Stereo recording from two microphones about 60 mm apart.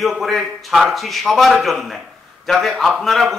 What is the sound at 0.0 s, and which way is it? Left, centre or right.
A man's voice, centre.